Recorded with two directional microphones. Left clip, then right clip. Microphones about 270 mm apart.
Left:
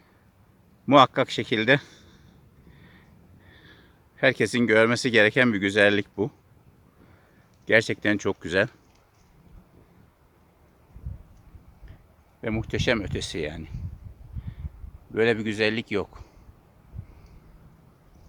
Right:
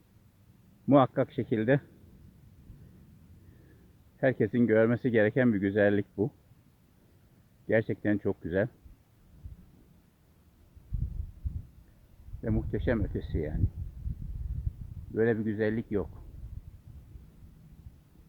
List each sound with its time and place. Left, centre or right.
0.9 s speech: centre
4.2 s speech: centre
7.7 s speech: centre
12.4 s speech: centre
15.1 s speech: centre